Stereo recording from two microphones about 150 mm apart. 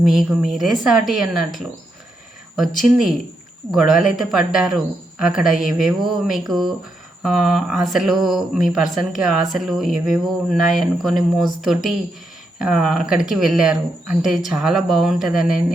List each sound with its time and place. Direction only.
0.0 s speech: centre (ahead or behind)
2.8 s speech: centre (ahead or behind)